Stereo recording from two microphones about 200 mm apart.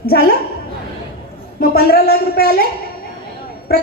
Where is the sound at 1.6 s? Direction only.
50° left (ahead or behind).